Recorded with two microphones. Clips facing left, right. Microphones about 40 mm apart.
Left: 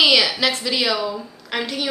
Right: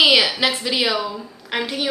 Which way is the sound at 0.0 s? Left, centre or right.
Centre.